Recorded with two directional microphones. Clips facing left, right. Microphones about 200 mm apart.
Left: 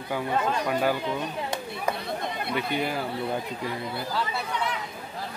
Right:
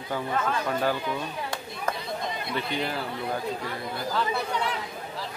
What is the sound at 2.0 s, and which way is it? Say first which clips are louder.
Chatter: left 1 dB; 60° left (ahead or behind).